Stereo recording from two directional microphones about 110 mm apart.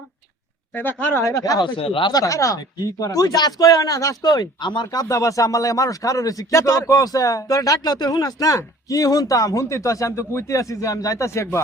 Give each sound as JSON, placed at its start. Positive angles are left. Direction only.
{"t": 0.7, "sound": "speech", "side_deg": 15}
{"t": 1.2, "sound": "speech", "side_deg": 30}
{"t": 1.7, "sound": "speech", "side_deg": 50}
{"t": 2.1, "sound": "speech", "side_deg": 30}